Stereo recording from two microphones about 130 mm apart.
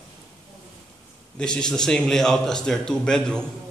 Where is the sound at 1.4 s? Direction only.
5° left (ahead or behind).